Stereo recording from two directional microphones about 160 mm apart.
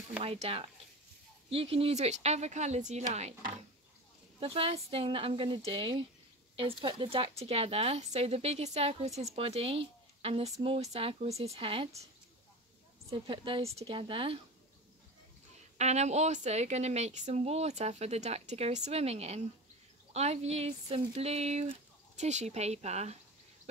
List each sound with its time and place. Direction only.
0.2 s a woman's voice: 40° right (ahead or behind)
4.4 s a woman's voice: 35° right (ahead or behind)
13.1 s a woman's voice: 35° right (ahead or behind)
15.8 s a woman's voice: 45° right (ahead or behind)